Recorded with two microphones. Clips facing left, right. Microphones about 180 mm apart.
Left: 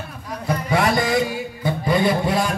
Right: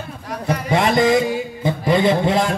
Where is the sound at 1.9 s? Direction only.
20° right (ahead or behind).